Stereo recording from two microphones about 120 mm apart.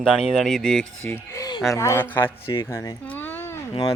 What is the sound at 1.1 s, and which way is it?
Speech, 15° left (ahead or behind).